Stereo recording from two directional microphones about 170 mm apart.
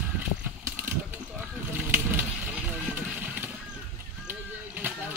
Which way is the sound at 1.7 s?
10° right (ahead or behind).